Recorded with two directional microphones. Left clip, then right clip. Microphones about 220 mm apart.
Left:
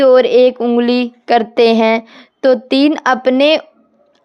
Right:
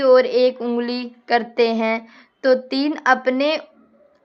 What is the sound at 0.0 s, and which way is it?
A woman's voice, 40° left (ahead or behind).